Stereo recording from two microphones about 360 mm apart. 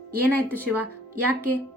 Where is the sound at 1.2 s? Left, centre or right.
Right.